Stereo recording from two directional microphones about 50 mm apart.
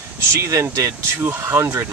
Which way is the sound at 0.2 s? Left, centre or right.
Right.